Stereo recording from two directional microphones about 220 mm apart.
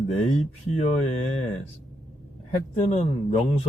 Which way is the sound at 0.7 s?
30° left (ahead or behind).